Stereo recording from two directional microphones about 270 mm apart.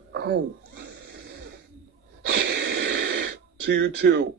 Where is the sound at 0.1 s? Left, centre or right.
Right.